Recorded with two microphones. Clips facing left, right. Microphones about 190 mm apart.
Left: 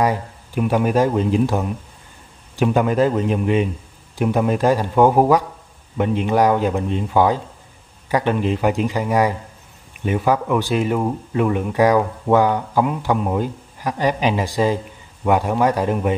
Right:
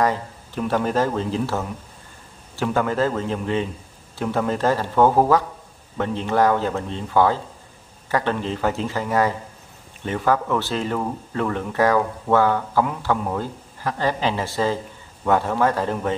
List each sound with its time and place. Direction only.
0.0 s speech: 10° left (ahead or behind)